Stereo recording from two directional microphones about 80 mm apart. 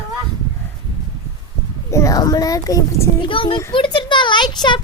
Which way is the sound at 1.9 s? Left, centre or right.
Left.